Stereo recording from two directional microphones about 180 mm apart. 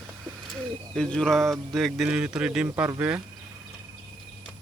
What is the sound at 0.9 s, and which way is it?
Speech, 5° left (ahead or behind).